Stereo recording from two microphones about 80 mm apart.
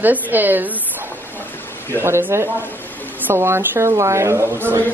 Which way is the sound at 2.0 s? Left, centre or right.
Right.